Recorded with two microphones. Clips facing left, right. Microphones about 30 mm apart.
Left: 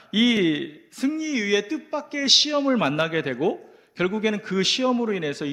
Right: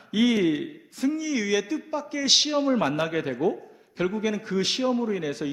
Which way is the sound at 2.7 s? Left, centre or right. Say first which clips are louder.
Left 2 dB; left.